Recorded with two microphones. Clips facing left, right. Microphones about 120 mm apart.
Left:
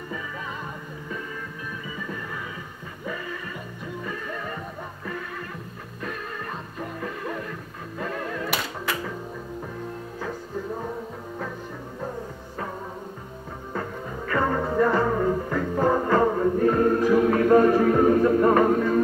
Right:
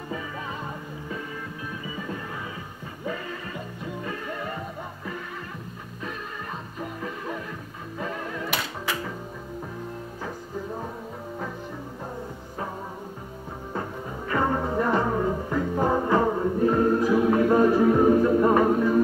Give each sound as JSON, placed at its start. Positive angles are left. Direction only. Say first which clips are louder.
{"t": 6.8, "sound": "music", "louder": "left 2 dB", "side_deg": -10}
{"t": 13.7, "sound": "music", "louder": "left 1 dB", "side_deg": -20}